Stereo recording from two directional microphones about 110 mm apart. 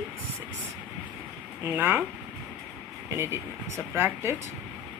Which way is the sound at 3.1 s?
25° right (ahead or behind).